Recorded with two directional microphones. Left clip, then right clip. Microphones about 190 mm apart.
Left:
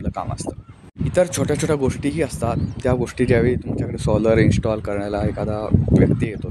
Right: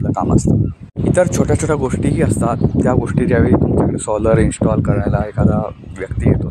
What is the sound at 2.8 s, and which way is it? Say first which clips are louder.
Speech: right 2 dB; 15° left (ahead or behind).